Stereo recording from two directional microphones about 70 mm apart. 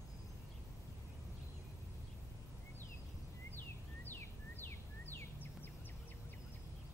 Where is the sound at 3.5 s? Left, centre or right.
Left.